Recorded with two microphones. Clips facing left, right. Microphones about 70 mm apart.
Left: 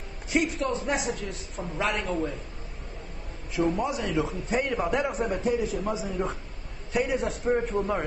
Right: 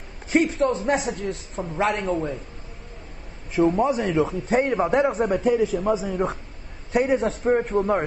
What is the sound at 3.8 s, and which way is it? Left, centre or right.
Speech, right.